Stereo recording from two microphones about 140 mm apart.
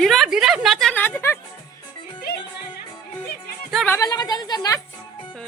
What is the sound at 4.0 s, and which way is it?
Speech, 30° left (ahead or behind).